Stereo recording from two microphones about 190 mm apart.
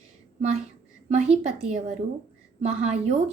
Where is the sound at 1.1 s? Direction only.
35° right (ahead or behind).